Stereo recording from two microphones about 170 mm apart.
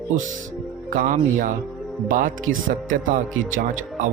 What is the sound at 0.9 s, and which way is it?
Speech, 50° right (ahead or behind).